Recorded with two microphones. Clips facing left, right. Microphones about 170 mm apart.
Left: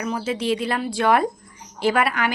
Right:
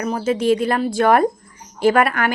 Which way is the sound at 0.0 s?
45° right (ahead or behind).